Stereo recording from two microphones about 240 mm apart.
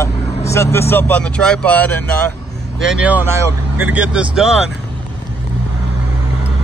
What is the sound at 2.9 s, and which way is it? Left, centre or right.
Speech, centre.